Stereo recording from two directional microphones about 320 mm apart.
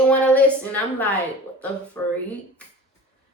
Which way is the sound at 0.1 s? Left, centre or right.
Centre.